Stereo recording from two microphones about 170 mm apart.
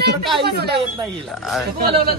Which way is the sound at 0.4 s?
70° right (ahead or behind).